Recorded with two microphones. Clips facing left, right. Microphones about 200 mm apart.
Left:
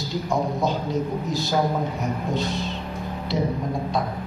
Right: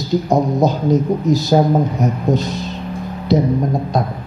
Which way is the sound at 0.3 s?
40° right (ahead or behind).